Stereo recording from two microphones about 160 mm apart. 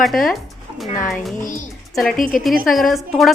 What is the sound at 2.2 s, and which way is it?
Speech, 55° left (ahead or behind).